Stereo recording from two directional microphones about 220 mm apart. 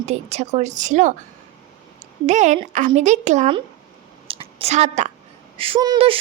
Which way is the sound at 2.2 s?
35° right (ahead or behind).